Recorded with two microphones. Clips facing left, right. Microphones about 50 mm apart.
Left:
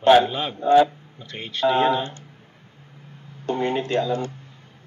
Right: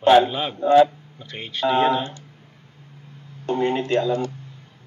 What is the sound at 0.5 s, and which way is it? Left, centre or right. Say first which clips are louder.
Speech: right 1 dB; centre.